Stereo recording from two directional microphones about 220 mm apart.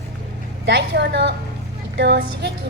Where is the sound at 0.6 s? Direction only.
50° right (ahead or behind).